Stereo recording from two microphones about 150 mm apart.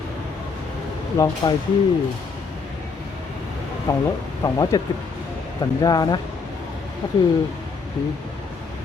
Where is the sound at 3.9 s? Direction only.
25° left (ahead or behind).